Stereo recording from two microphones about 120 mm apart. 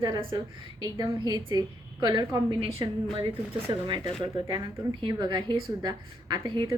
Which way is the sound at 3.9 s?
45° right (ahead or behind).